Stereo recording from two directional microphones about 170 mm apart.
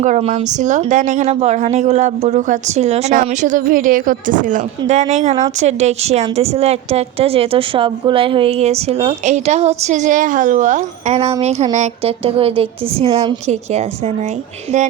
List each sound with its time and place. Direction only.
0.0 s a woman's voice: 40° right (ahead or behind)